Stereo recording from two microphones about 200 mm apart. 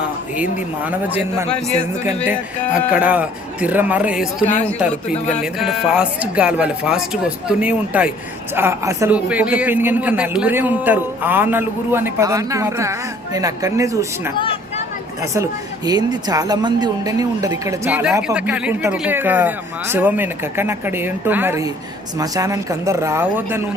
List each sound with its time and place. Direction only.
0.9 s a man's voice: 10° right (ahead or behind)
4.9 s speech: 35° left (ahead or behind)
5.4 s a man's voice: centre (ahead or behind)
14.3 s a sound: 25° left (ahead or behind)
15.9 s a man's voice: 20° right (ahead or behind)